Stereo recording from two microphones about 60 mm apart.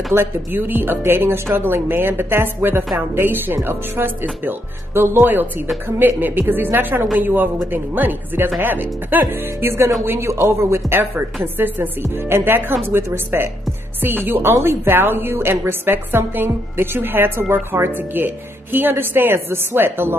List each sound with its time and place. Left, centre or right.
0.1 s a woman's voice: right
5.2 s a woman's voice: right
12.0 s a woman's voice: right